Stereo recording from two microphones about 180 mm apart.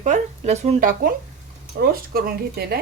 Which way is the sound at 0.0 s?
40° right (ahead or behind).